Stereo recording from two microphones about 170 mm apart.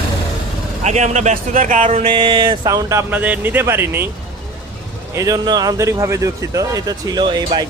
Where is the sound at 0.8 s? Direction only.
45° right (ahead or behind).